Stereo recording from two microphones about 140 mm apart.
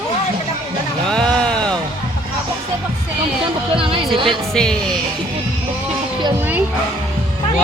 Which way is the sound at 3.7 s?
40° right (ahead or behind).